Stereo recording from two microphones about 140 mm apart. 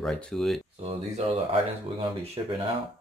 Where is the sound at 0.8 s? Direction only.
45° right (ahead or behind).